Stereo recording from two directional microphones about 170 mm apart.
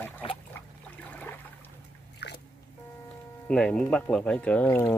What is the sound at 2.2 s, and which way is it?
Drip, 80° left.